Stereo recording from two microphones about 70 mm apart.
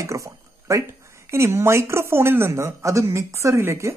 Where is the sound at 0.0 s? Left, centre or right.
Right.